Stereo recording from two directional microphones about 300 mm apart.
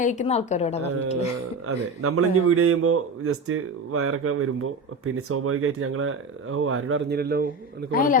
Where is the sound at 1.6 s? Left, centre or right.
Right.